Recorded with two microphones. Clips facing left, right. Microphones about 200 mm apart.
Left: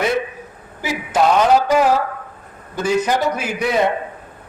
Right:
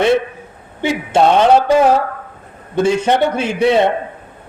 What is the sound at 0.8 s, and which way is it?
A man's voice, 30° right (ahead or behind).